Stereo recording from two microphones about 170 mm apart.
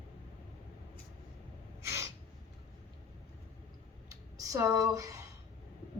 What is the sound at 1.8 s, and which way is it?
Gasp, 15° right (ahead or behind).